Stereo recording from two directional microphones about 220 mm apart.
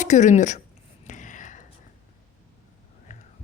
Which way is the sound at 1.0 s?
35° left (ahead or behind).